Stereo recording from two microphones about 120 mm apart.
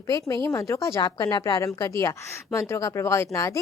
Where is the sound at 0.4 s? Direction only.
25° left (ahead or behind).